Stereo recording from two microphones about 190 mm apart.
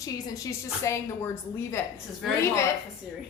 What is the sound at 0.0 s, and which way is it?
A woman's voice, 15° left (ahead or behind).